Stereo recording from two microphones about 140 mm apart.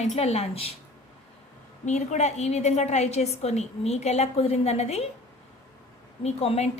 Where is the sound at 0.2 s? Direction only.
50° left (ahead or behind).